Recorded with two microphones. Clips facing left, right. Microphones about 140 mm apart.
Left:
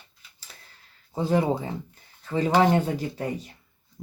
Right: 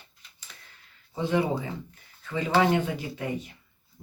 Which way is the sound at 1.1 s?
40° left (ahead or behind).